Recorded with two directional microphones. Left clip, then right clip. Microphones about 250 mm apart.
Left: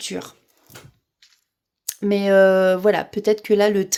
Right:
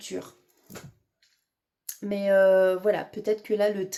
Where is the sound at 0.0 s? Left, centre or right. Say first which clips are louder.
Left 6 dB; left.